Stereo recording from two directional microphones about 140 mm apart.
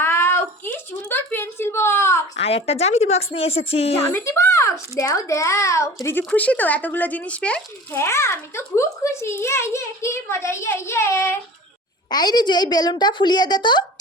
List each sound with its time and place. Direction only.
0.0 s a sound: 15° left (ahead or behind)
2.3 s a woman's voice: 50° left (ahead or behind)
4.1 s speech: 20° left (ahead or behind)
7.9 s speech: 20° left (ahead or behind)
12.1 s a woman's voice: 30° left (ahead or behind)